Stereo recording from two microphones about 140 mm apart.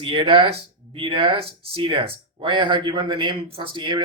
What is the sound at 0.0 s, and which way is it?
Speech, 35° right (ahead or behind).